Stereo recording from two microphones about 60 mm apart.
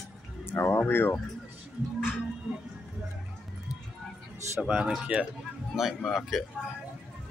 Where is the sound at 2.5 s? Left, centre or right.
Centre.